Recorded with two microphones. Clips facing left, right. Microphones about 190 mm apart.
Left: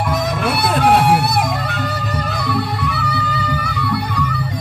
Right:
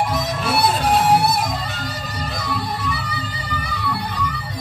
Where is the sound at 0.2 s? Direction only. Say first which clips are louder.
Left 2 dB; 55° left (ahead or behind).